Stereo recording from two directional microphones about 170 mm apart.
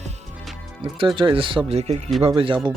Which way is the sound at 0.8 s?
30° right (ahead or behind).